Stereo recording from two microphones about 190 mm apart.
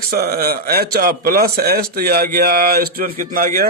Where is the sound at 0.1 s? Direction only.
50° right (ahead or behind).